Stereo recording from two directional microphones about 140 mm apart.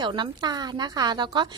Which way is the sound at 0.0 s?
30° right (ahead or behind).